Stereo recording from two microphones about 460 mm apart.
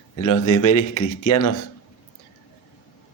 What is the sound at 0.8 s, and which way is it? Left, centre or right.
Speech, left.